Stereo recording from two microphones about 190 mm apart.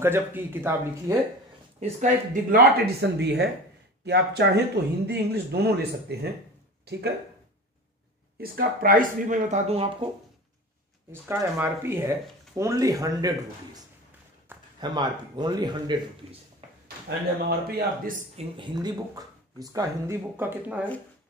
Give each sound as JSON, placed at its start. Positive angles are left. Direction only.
{"t": 0.0, "sound": "speech", "side_deg": -10}
{"t": 1.8, "sound": "speech", "side_deg": -40}
{"t": 8.4, "sound": "speech", "side_deg": -50}
{"t": 11.1, "sound": "speech", "side_deg": -10}
{"t": 17.5, "sound": "speech", "side_deg": -50}
{"t": 18.3, "sound": "speech", "side_deg": -25}